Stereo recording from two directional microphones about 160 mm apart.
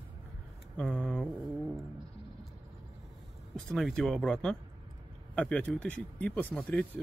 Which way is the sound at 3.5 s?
5° left (ahead or behind).